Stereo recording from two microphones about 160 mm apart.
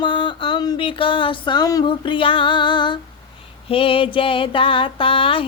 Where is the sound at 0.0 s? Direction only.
30° left (ahead or behind).